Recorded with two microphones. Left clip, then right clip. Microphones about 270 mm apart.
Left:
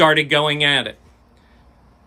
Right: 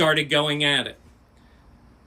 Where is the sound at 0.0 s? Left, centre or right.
Centre.